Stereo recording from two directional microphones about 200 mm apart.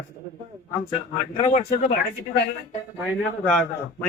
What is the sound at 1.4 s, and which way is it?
Speech, 35° left (ahead or behind).